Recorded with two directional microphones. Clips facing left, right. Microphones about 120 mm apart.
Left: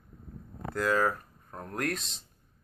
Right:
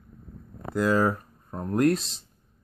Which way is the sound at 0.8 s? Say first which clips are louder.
Right 4 dB; 20° right (ahead or behind).